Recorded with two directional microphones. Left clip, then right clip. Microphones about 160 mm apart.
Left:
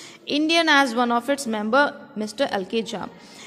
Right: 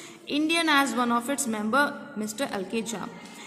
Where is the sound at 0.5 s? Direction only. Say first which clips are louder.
Left 5 dB; 40° left (ahead or behind).